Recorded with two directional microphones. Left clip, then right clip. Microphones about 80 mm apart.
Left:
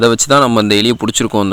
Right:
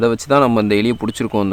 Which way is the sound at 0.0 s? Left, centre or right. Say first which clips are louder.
Left 4 dB; left.